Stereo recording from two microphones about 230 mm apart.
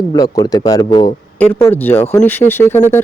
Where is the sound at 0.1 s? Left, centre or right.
Centre.